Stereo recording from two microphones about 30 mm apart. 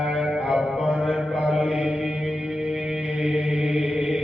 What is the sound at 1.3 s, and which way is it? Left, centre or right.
Mantra, right.